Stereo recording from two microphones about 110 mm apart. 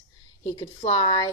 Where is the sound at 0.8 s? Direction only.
50° left (ahead or behind).